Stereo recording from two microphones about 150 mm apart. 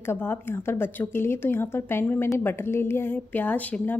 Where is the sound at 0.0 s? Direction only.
15° left (ahead or behind).